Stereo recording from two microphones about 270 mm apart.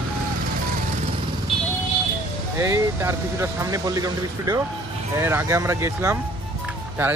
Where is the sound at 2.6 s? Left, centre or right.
Centre.